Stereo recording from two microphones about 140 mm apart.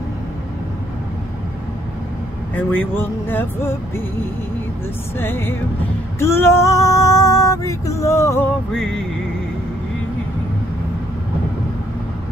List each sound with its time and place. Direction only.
2.5 s speech: 15° left (ahead or behind)
5.2 s speech: 15° left (ahead or behind)
6.1 s female singing: 20° left (ahead or behind)
8.7 s music: 5° left (ahead or behind)